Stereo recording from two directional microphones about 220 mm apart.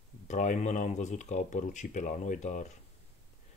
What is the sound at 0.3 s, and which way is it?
Speech, 35° left (ahead or behind).